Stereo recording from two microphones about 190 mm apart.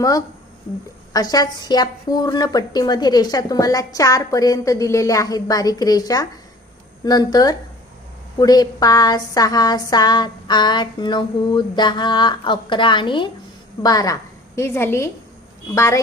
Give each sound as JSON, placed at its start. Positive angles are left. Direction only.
{"t": 1.1, "sound": "a woman's voice", "side_deg": 20}